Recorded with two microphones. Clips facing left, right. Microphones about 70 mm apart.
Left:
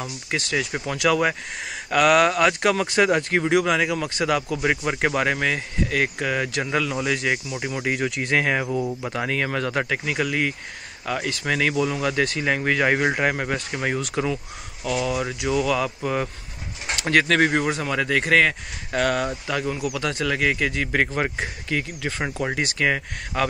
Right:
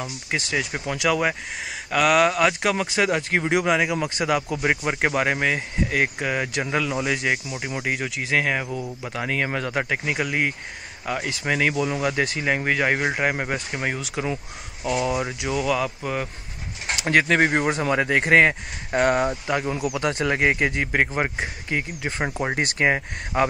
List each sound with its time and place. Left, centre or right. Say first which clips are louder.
0.3 s speech: left 1 dB; centre
14.9 s speech: right 1 dB; centre
15.4 s speech: left 2 dB; centre
17.6 s speech: right 2 dB; right
20.9 s speech: even; centre